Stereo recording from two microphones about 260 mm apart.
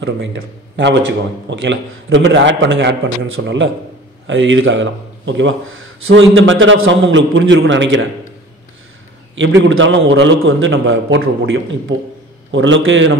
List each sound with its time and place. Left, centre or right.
1.5 s speech: right
9.3 s speech: right